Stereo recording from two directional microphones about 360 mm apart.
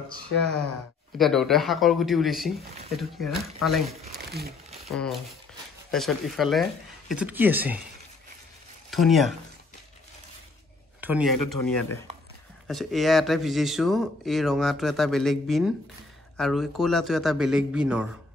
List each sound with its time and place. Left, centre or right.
1.1 s speech: centre
4.0 s crumpling: right
4.8 s speech: centre
8.9 s speech: centre
11.0 s speech: centre
11.3 s speech: left
11.6 s speech: centre